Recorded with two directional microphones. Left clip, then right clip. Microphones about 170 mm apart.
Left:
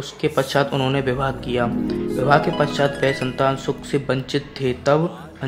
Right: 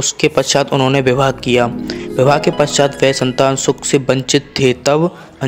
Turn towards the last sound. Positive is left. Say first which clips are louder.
# right 6 dB
turn(degrees=-40)  # may be behind; listen again after turning